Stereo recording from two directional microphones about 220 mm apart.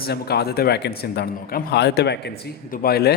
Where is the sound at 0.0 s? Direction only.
45° left (ahead or behind).